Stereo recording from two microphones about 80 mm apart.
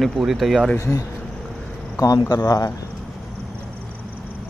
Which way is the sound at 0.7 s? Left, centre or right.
Left.